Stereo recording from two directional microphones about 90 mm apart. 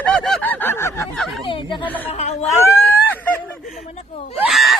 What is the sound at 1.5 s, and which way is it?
Speech, 65° left (ahead or behind).